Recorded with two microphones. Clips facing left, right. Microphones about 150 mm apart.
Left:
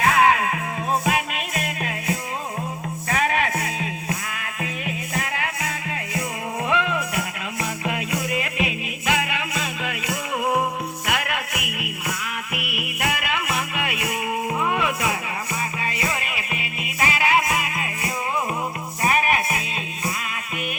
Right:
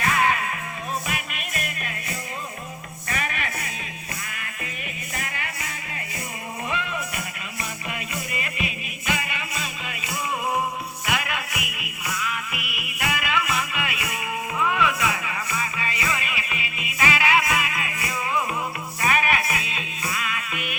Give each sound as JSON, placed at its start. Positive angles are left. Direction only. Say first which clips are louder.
{"t": 0.0, "sound": "music", "louder": "left 5 dB", "side_deg": 90}
{"t": 5.1, "sound": "music", "louder": "left 5 dB", "side_deg": 90}